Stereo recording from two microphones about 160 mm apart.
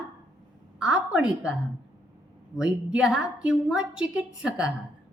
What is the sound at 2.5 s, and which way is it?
A woman's voice, 5° right (ahead or behind).